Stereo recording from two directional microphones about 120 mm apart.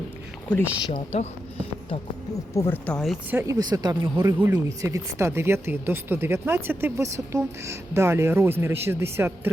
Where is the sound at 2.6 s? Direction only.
20° left (ahead or behind).